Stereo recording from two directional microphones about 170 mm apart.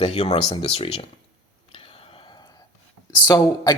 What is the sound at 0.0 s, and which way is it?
Speech, 35° left (ahead or behind).